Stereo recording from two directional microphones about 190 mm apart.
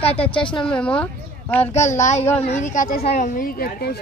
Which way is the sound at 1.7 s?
40° left (ahead or behind).